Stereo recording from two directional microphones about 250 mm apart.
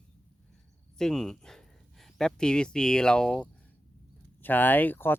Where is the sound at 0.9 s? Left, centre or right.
Centre.